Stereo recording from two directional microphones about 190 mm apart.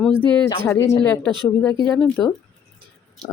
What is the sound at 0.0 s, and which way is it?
Speech, 10° left (ahead or behind).